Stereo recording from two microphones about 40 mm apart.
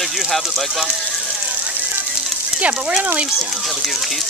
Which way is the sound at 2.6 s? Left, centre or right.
Right.